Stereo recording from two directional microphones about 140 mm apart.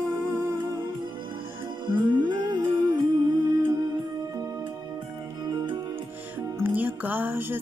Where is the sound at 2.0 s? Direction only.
30° right (ahead or behind).